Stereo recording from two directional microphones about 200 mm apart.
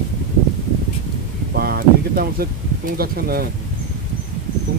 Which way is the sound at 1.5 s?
50° right (ahead or behind).